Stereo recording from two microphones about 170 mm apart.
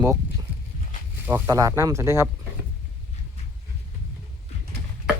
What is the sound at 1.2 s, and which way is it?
Speech, 10° right (ahead or behind).